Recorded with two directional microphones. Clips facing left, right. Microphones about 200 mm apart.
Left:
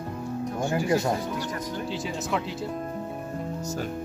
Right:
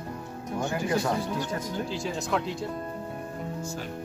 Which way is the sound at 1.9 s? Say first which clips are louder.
Even; centre (ahead or behind).